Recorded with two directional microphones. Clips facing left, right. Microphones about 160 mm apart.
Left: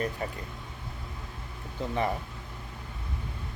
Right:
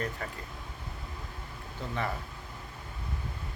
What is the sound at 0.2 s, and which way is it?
Speech, 20° left (ahead or behind).